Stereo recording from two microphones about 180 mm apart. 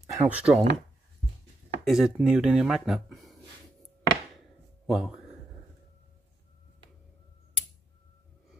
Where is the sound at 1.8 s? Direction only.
Centre (ahead or behind).